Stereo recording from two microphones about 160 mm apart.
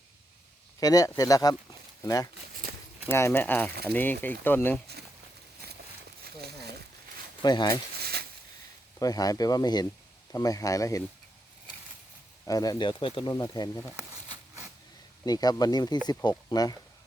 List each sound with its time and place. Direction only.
0.8 s speech: 20° left (ahead or behind)
6.2 s crumpling: 90° right
7.4 s speech: 25° left (ahead or behind)
7.9 s a sound: 75° right (ahead or behind)
9.0 s speech: 25° left (ahead or behind)
12.5 s speech: 25° left (ahead or behind)
15.2 s speech: 25° left (ahead or behind)